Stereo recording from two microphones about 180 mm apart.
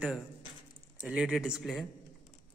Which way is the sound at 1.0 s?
5° right (ahead or behind).